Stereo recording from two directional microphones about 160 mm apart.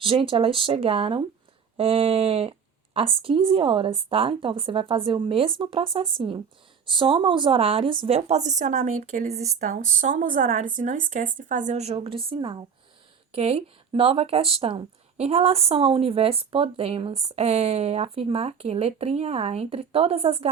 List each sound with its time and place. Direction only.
0.0 s a woman's voice: 35° right (ahead or behind)
11.9 s speech: 35° right (ahead or behind)